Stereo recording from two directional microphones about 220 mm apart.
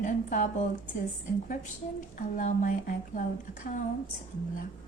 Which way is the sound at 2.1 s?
35° left (ahead or behind).